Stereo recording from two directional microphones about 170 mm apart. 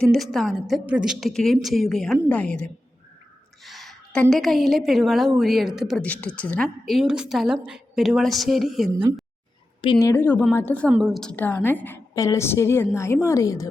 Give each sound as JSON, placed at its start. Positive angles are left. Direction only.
{"t": 0.0, "sound": "a woman's voice", "side_deg": 0}
{"t": 9.8, "sound": "a woman's voice", "side_deg": 30}
{"t": 10.1, "sound": "a woman's voice", "side_deg": 10}